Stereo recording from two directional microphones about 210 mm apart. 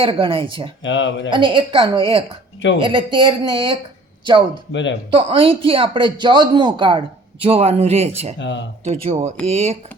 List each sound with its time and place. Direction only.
0.0 s a man's voice: 25° right (ahead or behind)
0.8 s speech: 60° left (ahead or behind)
1.3 s a man's voice: 25° right (ahead or behind)
4.7 s speech: 60° left (ahead or behind)
5.1 s a man's voice: 25° right (ahead or behind)
8.4 s speech: 60° left (ahead or behind)
8.8 s speech: 30° right (ahead or behind)